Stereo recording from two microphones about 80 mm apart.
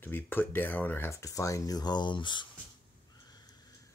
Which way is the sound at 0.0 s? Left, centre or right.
Left.